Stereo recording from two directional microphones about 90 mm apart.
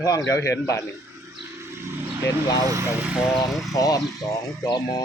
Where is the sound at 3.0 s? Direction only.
15° right (ahead or behind).